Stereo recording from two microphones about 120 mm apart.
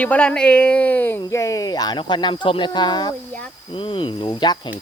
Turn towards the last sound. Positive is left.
turn(degrees=35)  # may be behind; listen again after turning